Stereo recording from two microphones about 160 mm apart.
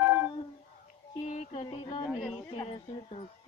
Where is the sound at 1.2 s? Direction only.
45° left (ahead or behind).